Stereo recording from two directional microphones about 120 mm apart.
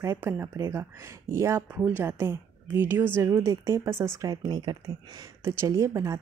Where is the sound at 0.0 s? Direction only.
20° right (ahead or behind).